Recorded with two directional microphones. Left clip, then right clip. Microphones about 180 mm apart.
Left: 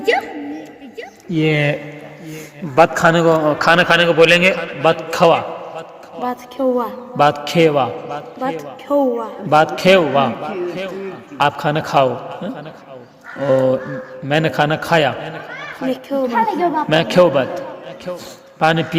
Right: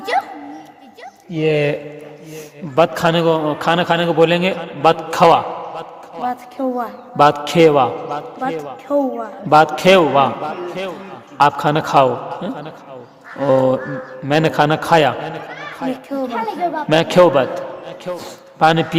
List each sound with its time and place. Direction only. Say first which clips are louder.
1.3 s speech: even; 40° right (ahead or behind)
2.7 s a man's voice: left 3 dB; 20° right (ahead or behind)
3.8 s speech: left 1 dB; 35° right (ahead or behind)
4.5 s a sound: right 1 dB; 25° right (ahead or behind)
6.2 s a woman's voice: left 3 dB; 10° right (ahead or behind)
7.2 s a man's voice: right 2 dB; 25° right (ahead or behind)
8.9 s a man's voice: left 2 dB; 5° right (ahead or behind)
9.5 s a man's voice: right 1 dB; 25° right (ahead or behind)
16.0 s a man's voice: left 7 dB; 15° right (ahead or behind)